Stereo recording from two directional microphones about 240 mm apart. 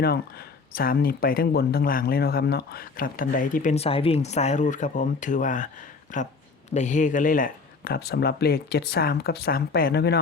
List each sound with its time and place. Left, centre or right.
0.8 s speech: left